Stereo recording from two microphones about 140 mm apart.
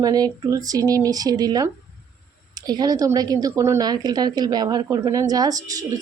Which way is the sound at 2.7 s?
30° right (ahead or behind).